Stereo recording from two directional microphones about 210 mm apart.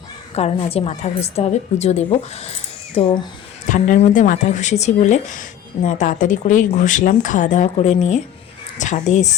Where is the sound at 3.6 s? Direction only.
35° left (ahead or behind).